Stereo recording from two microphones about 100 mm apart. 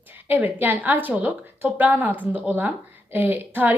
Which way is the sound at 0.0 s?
20° right (ahead or behind).